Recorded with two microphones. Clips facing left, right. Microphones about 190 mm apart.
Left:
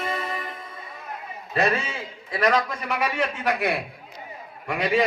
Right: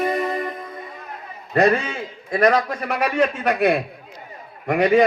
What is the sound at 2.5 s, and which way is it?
Speech, 35° right (ahead or behind).